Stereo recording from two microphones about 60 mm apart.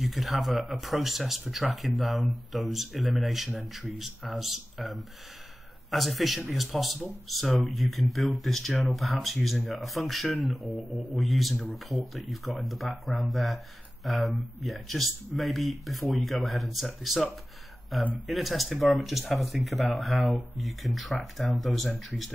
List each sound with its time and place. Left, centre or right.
0.0 s speech: centre